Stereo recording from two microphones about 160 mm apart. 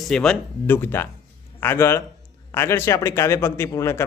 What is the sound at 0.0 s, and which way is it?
A man's voice, 5° left (ahead or behind).